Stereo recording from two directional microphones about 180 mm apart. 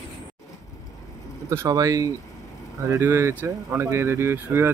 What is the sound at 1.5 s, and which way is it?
Speech, 15° right (ahead or behind).